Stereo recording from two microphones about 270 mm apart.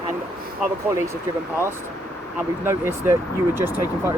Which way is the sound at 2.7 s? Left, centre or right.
Centre.